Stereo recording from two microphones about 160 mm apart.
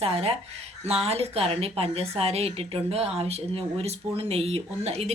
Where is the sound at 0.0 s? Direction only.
40° right (ahead or behind).